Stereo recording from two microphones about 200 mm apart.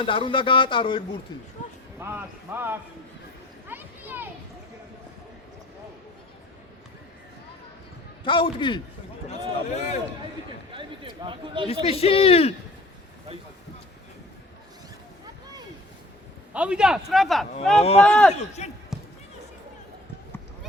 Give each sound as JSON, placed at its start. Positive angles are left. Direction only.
{"t": 0.0, "sound": "speech", "side_deg": 25}
{"t": 2.0, "sound": "speech", "side_deg": -10}
{"t": 3.7, "sound": "a sound", "side_deg": -10}
{"t": 8.2, "sound": "speech", "side_deg": 25}
{"t": 9.6, "sound": "speech", "side_deg": 35}
{"t": 10.7, "sound": "a sound", "side_deg": -25}
{"t": 11.9, "sound": "speech", "side_deg": 30}
{"t": 16.5, "sound": "speech", "side_deg": -5}
{"t": 18.6, "sound": "speech", "side_deg": 35}